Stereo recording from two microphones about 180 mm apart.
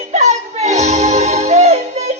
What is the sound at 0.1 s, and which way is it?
Music, 40° right (ahead or behind).